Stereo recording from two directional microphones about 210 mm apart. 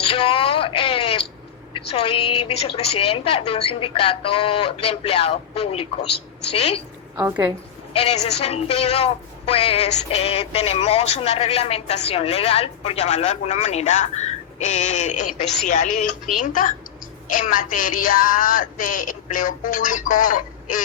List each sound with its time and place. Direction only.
0.0 s a sound: 25° left (ahead or behind)
1.9 s speech: 25° left (ahead or behind)
7.2 s a woman's voice: 10° right (ahead or behind)
7.9 s speech: 30° left (ahead or behind)